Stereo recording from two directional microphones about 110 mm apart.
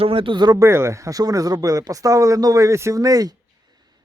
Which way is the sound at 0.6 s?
25° right (ahead or behind).